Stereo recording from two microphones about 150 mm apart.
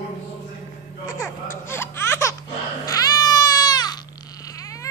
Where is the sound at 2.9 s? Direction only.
25° left (ahead or behind).